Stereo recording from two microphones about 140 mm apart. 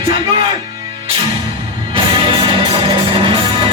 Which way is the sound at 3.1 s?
40° right (ahead or behind).